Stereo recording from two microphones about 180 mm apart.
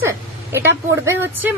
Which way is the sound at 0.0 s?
15° right (ahead or behind).